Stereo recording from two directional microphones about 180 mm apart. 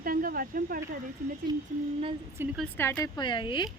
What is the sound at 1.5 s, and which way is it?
Speech, 25° right (ahead or behind).